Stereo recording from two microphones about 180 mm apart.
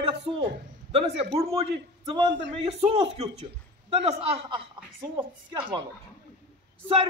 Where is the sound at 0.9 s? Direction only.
30° right (ahead or behind).